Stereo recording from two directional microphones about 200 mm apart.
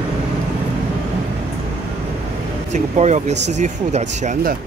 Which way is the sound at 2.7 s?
35° right (ahead or behind).